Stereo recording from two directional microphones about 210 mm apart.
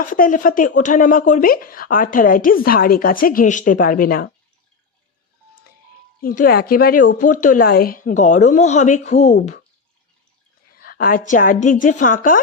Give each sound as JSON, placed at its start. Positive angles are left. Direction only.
{"t": 0.0, "sound": "speech", "side_deg": 40}
{"t": 6.2, "sound": "a woman's voice", "side_deg": 45}
{"t": 10.8, "sound": "speech", "side_deg": 45}